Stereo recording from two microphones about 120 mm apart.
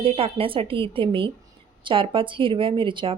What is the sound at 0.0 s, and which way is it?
Speech, 50° right (ahead or behind).